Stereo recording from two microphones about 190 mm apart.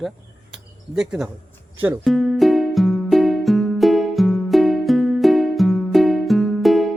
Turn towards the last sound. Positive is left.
turn(degrees=0)  # may be behind; listen again after turning